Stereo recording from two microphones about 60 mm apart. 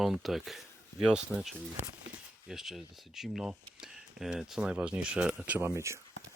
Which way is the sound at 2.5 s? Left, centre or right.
Centre.